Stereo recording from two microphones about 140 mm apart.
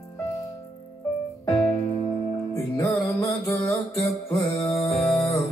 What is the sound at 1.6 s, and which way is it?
Music, 25° left (ahead or behind).